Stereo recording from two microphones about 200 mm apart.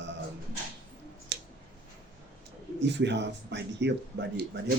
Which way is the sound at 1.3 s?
60° right (ahead or behind).